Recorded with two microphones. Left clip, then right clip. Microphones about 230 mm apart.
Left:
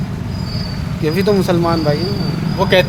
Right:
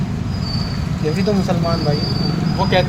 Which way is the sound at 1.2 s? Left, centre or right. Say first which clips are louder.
Left 6 dB; left.